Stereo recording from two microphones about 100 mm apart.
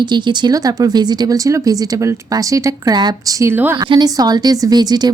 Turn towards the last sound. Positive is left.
turn(degrees=-45)  # may be behind; listen again after turning